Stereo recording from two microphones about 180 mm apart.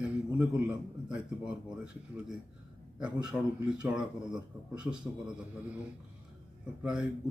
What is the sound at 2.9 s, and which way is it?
A man's voice, 5° right (ahead or behind).